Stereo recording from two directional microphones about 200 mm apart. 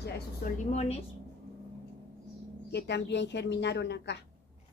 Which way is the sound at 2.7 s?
60° left (ahead or behind).